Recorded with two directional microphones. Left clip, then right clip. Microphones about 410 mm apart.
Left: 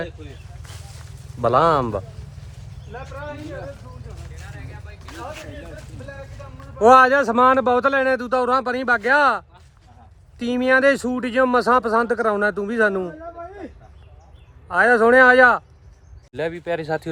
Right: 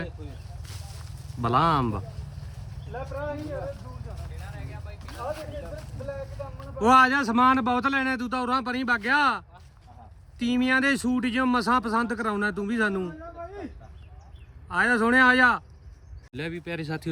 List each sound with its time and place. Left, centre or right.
1.4 s speech: centre
2.9 s speech: right
4.4 s vehicle: right
5.1 s a sound: right
6.7 s speech: centre
14.7 s speech: centre